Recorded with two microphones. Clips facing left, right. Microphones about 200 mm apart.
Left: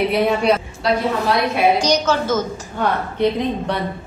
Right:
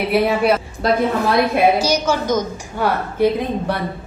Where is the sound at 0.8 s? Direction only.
50° right (ahead or behind).